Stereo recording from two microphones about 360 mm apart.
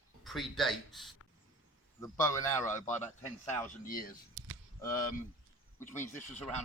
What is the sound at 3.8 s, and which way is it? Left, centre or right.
Speech, left.